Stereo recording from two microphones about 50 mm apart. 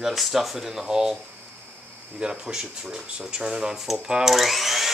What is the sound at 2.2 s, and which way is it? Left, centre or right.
Speech, centre.